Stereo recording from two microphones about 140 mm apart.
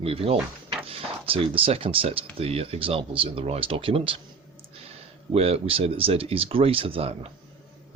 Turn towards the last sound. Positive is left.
turn(degrees=-45)  # may be behind; listen again after turning